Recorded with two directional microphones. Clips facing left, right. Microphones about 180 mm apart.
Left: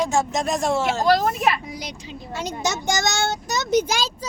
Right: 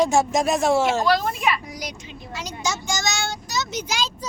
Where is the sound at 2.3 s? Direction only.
55° left (ahead or behind).